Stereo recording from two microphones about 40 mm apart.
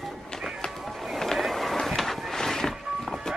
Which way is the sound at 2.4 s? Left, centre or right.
Centre.